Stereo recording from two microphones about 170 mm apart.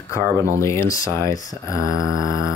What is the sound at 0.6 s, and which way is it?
Speech, 15° left (ahead or behind).